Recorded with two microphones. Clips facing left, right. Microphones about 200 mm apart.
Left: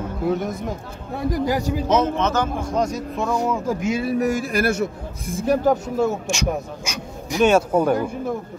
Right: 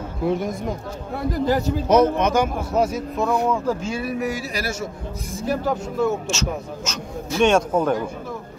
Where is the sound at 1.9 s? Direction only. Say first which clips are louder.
Right 4 dB; 10° right (ahead or behind).